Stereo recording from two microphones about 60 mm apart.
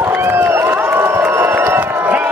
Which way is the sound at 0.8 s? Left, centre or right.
Right.